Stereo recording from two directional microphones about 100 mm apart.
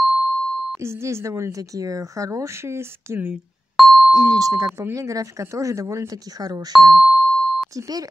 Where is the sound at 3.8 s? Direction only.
Centre (ahead or behind).